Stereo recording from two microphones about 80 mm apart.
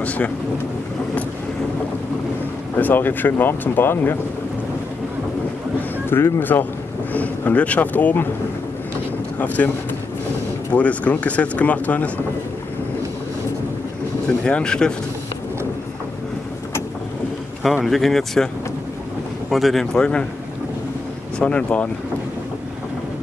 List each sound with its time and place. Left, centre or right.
2.8 s speech: left
5.8 s speech: left
7.1 s speech: left
10.7 s speech: centre
14.4 s speech: centre
17.8 s speech: centre
19.5 s speech: centre
21.4 s speech: centre